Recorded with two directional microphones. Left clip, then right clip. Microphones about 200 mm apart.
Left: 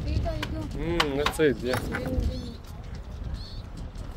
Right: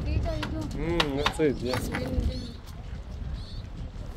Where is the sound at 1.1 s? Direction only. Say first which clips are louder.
Left 2 dB; 30° left (ahead or behind).